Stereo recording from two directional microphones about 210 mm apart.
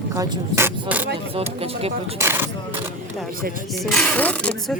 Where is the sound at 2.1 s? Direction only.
10° right (ahead or behind).